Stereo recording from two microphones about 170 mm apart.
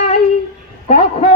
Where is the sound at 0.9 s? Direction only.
45° left (ahead or behind).